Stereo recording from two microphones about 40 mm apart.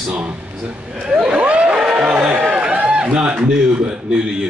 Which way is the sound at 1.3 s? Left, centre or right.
Right.